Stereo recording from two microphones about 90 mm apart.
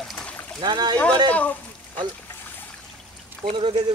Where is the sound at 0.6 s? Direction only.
55° right (ahead or behind).